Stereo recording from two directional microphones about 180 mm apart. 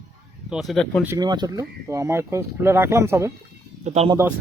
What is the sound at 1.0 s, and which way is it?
Speech, 20° right (ahead or behind).